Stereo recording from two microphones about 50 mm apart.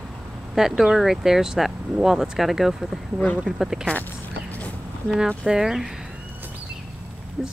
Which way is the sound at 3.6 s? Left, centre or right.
Centre.